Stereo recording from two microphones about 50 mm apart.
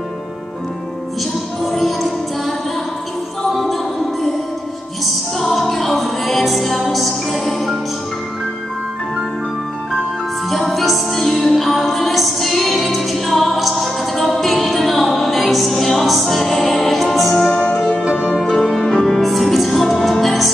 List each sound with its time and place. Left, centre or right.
1.6 s music: centre
3.5 s music: centre
10.5 s music: centre
17.7 s music: centre
18.0 s music: centre
18.4 s music: centre
18.9 s music: centre